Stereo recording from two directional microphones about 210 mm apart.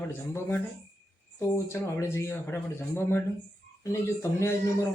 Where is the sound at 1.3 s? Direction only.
15° left (ahead or behind).